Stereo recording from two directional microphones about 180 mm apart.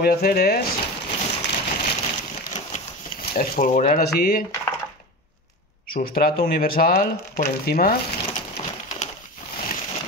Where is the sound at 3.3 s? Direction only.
50° left (ahead or behind).